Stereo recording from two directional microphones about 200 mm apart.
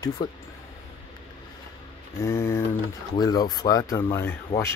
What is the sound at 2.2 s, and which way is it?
Speech, 15° left (ahead or behind).